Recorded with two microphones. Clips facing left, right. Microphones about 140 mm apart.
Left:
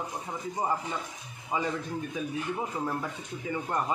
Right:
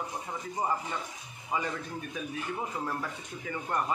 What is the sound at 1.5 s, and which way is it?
Speech, 20° left (ahead or behind).